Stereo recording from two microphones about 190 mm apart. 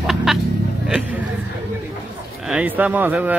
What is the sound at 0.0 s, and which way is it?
Music, centre (ahead or behind).